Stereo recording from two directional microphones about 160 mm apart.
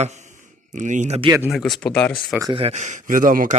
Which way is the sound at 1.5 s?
Centre (ahead or behind).